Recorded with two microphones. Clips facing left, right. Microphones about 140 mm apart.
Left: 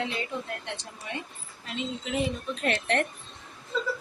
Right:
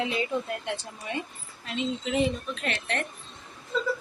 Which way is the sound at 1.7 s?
Centre (ahead or behind).